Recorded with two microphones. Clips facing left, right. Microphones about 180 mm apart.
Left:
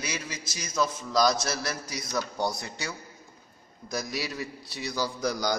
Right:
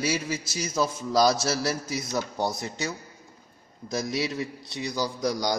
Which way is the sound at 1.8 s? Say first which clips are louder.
Right 3 dB; 25° right (ahead or behind).